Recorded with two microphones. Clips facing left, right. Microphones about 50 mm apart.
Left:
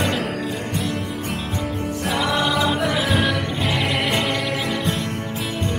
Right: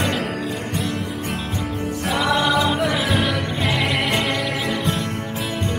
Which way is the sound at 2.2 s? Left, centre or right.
Right.